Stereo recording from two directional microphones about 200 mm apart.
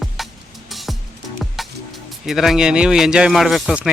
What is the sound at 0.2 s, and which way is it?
Music, centre (ahead or behind).